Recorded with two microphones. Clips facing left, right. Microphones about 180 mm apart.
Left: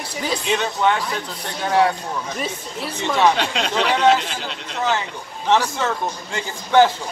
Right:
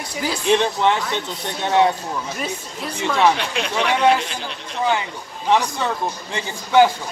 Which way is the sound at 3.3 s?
70° left (ahead or behind).